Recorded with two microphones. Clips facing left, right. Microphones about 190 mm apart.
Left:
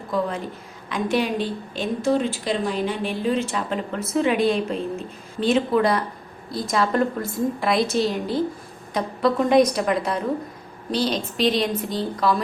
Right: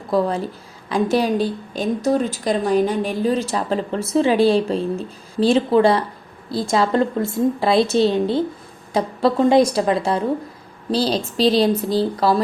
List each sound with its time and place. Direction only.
0.1 s a woman's voice: 35° right (ahead or behind)